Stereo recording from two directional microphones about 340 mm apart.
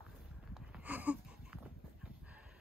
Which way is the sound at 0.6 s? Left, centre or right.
Centre.